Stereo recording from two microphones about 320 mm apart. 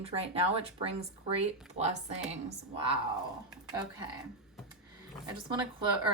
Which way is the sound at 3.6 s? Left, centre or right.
Centre.